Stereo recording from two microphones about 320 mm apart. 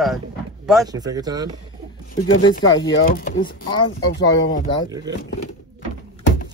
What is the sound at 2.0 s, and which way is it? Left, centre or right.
Speech, left.